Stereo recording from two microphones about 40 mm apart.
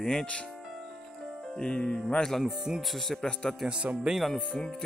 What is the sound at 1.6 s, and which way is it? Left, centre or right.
Speech, left.